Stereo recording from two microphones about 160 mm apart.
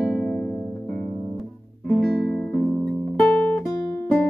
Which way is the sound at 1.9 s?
5° left (ahead or behind).